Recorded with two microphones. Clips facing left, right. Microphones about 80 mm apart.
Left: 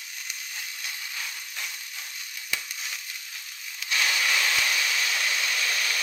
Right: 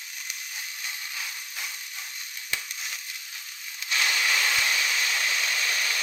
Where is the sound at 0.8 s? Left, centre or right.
Centre.